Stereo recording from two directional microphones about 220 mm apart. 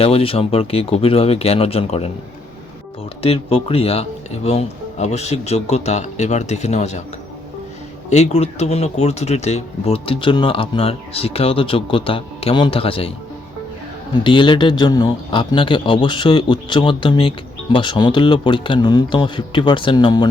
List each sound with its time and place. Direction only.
0.0 s a man's voice: 25° left (ahead or behind)
3.2 s speech: 25° left (ahead or behind)
8.1 s a man's voice: 30° left (ahead or behind)
14.3 s a man's voice: 20° left (ahead or behind)